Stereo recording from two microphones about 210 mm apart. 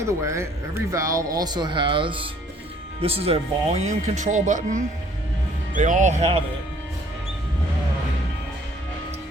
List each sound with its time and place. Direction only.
0.1 s speech: 15° right (ahead or behind); by 6.4 s 30° right (ahead or behind)